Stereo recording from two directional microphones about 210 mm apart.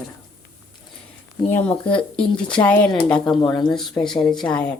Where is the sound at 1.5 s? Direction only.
5° left (ahead or behind).